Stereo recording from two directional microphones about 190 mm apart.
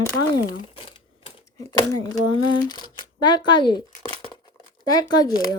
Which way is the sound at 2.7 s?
25° left (ahead or behind).